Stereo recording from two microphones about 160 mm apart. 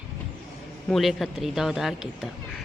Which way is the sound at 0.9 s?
Centre (ahead or behind).